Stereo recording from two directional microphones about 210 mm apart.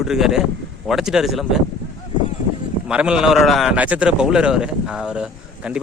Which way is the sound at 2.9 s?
5° right (ahead or behind).